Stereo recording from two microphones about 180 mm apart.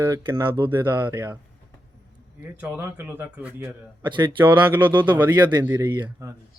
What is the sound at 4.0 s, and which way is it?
Speech, 25° right (ahead or behind).